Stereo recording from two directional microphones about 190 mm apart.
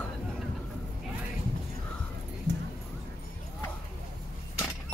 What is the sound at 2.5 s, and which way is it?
Clip-clop, 65° right (ahead or behind).